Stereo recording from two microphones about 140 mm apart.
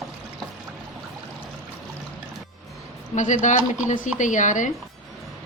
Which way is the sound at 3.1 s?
60° left (ahead or behind).